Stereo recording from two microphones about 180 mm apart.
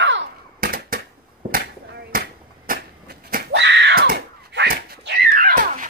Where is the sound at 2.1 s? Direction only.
55° right (ahead or behind).